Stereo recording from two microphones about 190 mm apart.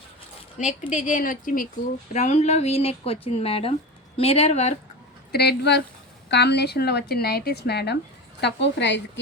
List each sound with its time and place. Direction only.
0.9 s speech: 40° left (ahead or behind)
5.3 s a woman's voice: 55° left (ahead or behind)